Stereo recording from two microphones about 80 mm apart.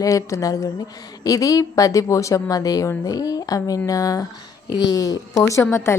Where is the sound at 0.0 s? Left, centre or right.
Left.